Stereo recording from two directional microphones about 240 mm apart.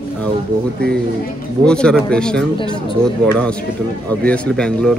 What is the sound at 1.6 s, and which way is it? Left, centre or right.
Speech, centre.